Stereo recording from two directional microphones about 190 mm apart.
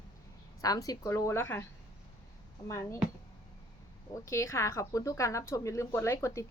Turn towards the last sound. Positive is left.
turn(degrees=15)  # may be behind; listen again after turning